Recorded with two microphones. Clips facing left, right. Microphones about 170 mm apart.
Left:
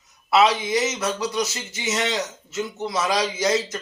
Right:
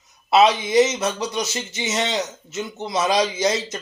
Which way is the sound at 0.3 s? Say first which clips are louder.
Right 2 dB; 20° right (ahead or behind).